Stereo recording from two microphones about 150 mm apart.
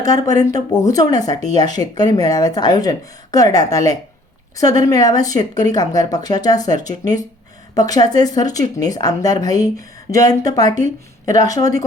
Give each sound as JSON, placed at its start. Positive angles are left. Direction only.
{"t": 0.0, "sound": "a woman's voice", "side_deg": 25}